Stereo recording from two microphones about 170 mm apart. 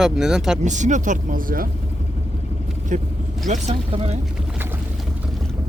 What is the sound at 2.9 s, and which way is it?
Speech, 45° right (ahead or behind).